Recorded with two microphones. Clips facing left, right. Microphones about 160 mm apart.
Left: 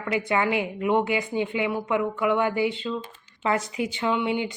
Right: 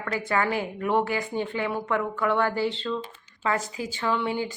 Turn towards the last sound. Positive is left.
turn(degrees=20)  # may be behind; listen again after turning